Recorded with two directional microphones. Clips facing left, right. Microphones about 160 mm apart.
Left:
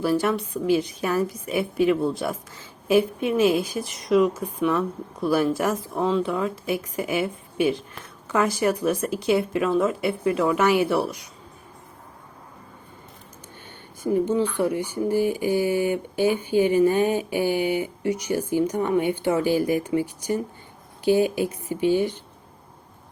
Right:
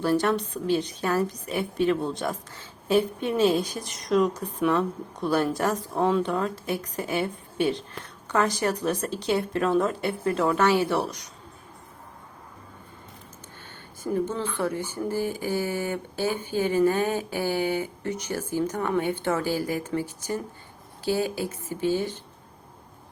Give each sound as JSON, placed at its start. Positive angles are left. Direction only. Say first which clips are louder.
{"t": 0.0, "sound": "speech", "louder": "left 1 dB", "side_deg": 10}
{"t": 14.0, "sound": "speech", "louder": "left 6 dB", "side_deg": 15}